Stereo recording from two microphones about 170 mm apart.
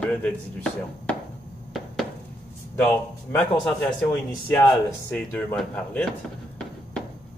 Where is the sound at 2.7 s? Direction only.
10° left (ahead or behind).